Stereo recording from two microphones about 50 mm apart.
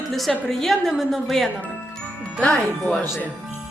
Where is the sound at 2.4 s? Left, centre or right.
Left.